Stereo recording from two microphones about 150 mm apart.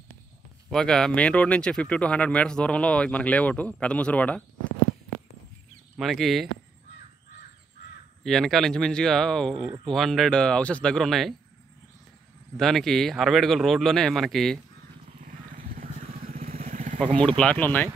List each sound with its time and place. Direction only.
0.7 s speech: 5° left (ahead or behind)
5.9 s speech: centre (ahead or behind)
8.2 s speech: centre (ahead or behind)
12.5 s speech: 5° left (ahead or behind)
15.0 s vehicle: 50° right (ahead or behind)
17.0 s speech: 5° left (ahead or behind)